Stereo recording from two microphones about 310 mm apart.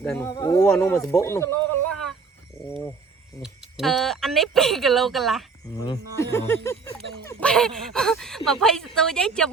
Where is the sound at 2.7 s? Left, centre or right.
Centre.